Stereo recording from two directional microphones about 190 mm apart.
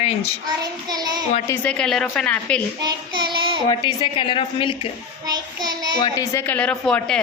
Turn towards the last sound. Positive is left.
turn(degrees=5)  # may be behind; listen again after turning